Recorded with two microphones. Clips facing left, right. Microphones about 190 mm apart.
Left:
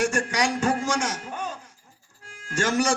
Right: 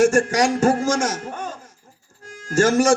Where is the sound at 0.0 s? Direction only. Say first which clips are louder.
Right 8 dB; 45° right (ahead or behind).